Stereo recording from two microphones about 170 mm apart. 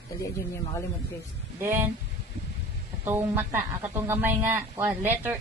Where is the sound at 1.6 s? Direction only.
10° right (ahead or behind).